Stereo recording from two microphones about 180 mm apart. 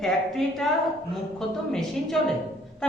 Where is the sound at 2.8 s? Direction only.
5° left (ahead or behind).